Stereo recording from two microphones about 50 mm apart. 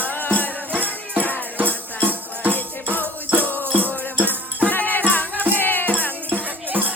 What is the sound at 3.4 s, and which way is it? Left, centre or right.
Music, left.